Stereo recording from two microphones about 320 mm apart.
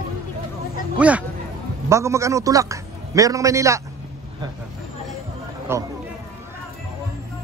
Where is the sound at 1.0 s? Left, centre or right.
Centre.